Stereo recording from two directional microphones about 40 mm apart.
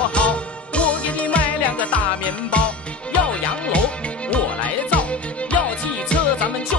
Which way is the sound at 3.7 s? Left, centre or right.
Left.